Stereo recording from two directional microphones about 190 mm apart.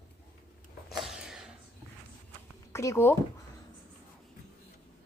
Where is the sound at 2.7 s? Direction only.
15° left (ahead or behind).